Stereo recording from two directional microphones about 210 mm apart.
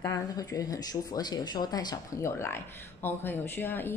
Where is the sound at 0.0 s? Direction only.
15° left (ahead or behind).